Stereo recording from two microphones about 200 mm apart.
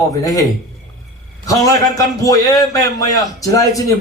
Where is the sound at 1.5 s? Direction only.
15° left (ahead or behind).